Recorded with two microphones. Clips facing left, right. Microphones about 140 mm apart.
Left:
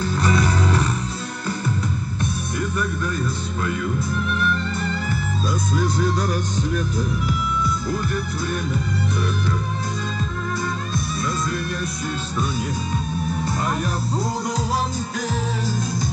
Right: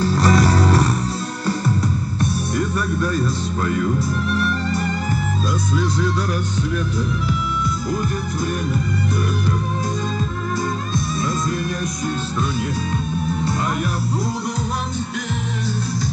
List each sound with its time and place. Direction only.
0.0 s music: 35° right (ahead or behind)
2.1 s music: 35° right (ahead or behind)
4.3 s music: 35° right (ahead or behind)